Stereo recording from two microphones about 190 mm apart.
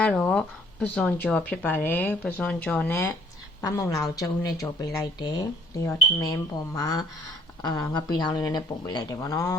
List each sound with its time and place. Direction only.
0.0 s speech: 5° left (ahead or behind)